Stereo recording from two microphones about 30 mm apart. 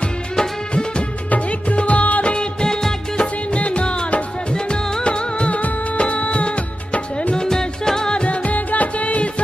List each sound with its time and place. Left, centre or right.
0.4 s music: left
1.8 s music of bollywood: left
2.2 s music of bollywood: left
3.5 s music: left
7.3 s music: centre
8.1 s music: left
8.5 s music: left